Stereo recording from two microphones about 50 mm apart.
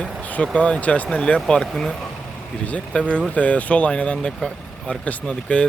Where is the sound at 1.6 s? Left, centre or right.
Centre.